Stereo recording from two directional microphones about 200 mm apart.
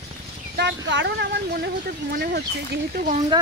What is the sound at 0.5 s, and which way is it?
Speech, 60° right (ahead or behind).